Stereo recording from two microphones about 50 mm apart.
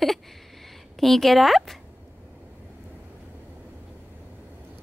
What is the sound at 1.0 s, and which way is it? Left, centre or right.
Speech, centre.